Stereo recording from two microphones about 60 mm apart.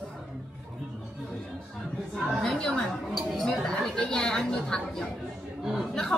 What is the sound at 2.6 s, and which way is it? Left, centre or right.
A woman's voice, centre.